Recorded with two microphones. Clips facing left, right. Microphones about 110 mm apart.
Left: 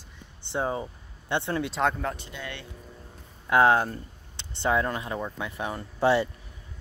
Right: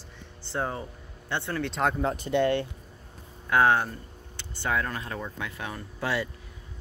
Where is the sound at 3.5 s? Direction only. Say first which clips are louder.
Left 2 dB; 25° left (ahead or behind).